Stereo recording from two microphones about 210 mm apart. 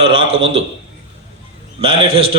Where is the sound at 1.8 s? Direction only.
25° right (ahead or behind).